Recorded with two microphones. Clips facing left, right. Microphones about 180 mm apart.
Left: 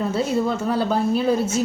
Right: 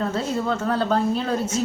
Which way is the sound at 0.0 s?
10° left (ahead or behind).